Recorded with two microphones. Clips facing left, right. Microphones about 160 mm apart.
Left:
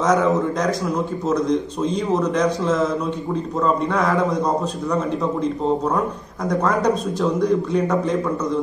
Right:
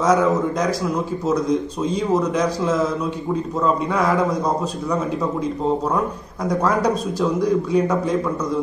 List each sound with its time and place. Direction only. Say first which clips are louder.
0.0 s a man's voice: right 1 dB; 5° right (ahead or behind)
5.9 s a man's voice: even; centre (ahead or behind)